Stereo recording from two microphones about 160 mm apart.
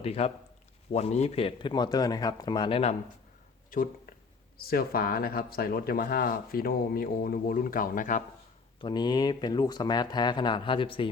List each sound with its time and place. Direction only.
0.0 s a man's voice: 40° left (ahead or behind)
3.7 s speech: 60° left (ahead or behind)
8.8 s speech: 25° left (ahead or behind)